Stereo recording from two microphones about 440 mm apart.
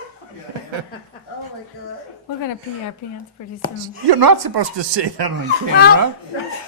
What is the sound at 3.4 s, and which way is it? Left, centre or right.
Speech, left.